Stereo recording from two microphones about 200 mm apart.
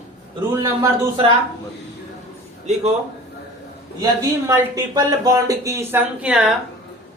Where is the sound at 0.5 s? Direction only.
15° right (ahead or behind).